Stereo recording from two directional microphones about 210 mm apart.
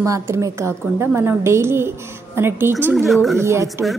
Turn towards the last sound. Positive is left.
turn(degrees=-15)  # may be behind; listen again after turning